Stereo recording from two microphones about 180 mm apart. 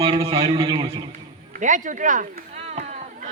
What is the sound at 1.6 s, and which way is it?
Speech, 45° right (ahead or behind).